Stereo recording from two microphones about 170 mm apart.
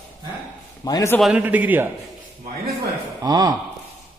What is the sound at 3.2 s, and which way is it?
Speech, 25° right (ahead or behind).